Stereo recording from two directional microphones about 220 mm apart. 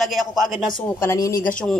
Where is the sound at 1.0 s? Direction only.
15° left (ahead or behind).